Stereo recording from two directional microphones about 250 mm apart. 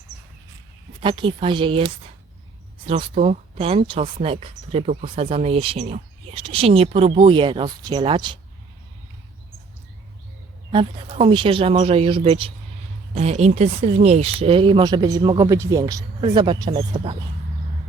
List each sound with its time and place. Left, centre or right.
1.0 s speech: centre
10.7 s speech: right